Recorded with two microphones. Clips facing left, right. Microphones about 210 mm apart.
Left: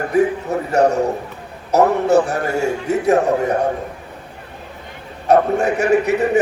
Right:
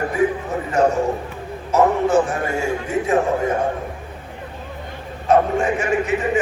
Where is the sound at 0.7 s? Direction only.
40° left (ahead or behind).